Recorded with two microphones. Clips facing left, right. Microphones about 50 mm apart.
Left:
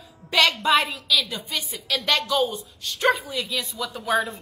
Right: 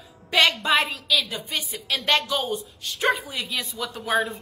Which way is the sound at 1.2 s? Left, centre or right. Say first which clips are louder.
Even; right.